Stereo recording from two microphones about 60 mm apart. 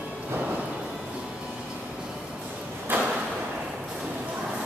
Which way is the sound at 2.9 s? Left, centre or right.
Right.